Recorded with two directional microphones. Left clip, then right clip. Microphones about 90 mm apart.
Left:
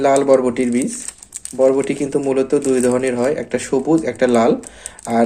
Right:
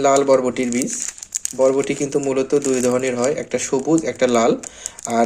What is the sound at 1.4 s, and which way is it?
Speech, 35° right (ahead or behind).